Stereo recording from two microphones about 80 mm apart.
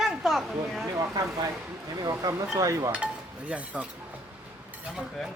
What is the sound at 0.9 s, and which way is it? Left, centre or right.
Speech, right.